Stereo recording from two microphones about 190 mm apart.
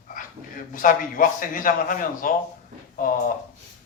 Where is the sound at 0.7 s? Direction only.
45° left (ahead or behind).